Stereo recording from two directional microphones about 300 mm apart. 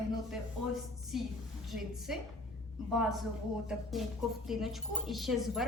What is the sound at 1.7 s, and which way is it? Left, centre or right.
Speech, centre.